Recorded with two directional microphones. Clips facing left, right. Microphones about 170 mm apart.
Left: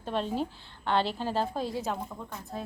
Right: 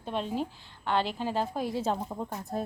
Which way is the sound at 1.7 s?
30° right (ahead or behind).